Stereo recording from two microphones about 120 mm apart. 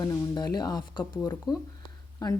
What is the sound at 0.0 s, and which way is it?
A woman's voice, 30° left (ahead or behind).